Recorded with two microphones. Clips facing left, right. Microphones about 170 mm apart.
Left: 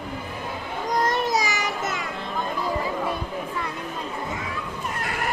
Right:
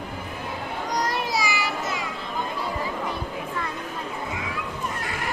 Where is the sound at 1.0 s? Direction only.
45° left (ahead or behind).